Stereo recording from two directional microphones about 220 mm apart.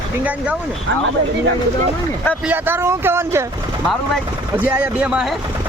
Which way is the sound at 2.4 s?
10° right (ahead or behind).